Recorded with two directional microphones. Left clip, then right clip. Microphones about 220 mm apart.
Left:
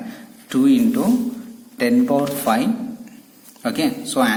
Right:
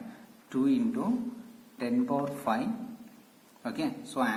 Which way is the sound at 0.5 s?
50° left (ahead or behind).